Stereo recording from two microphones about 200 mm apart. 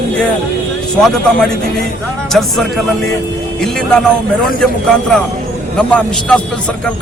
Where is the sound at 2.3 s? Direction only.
Centre (ahead or behind).